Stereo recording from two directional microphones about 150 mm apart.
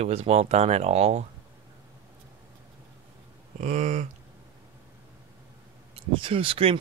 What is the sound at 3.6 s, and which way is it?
Speech, 55° right (ahead or behind).